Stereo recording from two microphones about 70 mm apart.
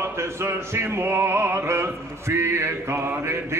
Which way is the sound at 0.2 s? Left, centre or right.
Right.